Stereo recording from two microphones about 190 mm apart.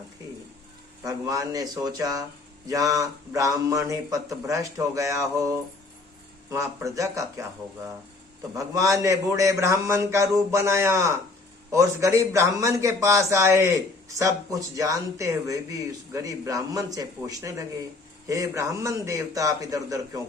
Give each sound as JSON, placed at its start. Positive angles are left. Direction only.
{"t": 1.0, "sound": "speech", "side_deg": -20}
{"t": 8.5, "sound": "speech", "side_deg": -15}